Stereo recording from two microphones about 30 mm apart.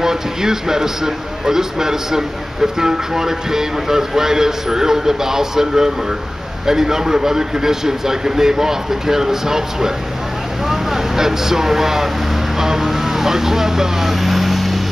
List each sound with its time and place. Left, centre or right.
0.0 s a man's voice: centre